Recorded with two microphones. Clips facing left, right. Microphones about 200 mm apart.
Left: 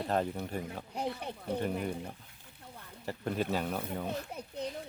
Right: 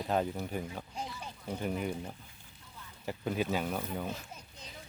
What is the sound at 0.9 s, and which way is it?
Speech, 60° left (ahead or behind).